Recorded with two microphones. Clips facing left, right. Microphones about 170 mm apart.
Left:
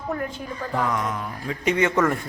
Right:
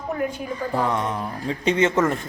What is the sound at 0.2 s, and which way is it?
Speech, 10° right (ahead or behind).